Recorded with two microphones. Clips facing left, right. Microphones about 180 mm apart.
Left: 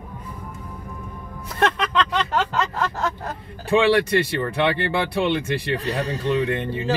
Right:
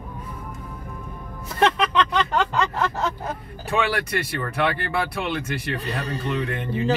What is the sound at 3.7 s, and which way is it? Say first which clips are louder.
Speech: left 7 dB; 30° left (ahead or behind).